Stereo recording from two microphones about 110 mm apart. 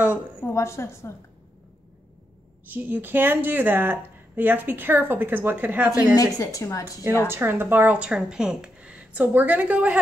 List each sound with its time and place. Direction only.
0.4 s a woman's voice: 25° left (ahead or behind)
2.6 s speech: 15° right (ahead or behind)
6.1 s a woman's voice: 30° left (ahead or behind)
7.2 s speech: 20° right (ahead or behind)